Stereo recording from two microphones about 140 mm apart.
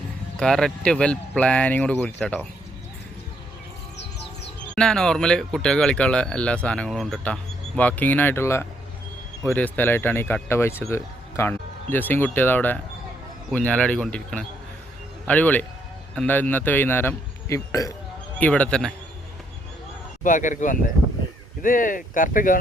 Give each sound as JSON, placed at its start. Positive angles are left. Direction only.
{"t": 0.3, "sound": "speech", "side_deg": 5}
{"t": 4.7, "sound": "speech", "side_deg": 5}
{"t": 18.3, "sound": "speech", "side_deg": 10}
{"t": 20.2, "sound": "speech", "side_deg": 65}